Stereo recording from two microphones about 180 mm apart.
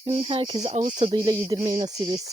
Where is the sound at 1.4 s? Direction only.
20° right (ahead or behind).